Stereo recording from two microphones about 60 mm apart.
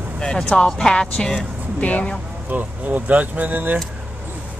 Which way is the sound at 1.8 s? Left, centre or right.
Left.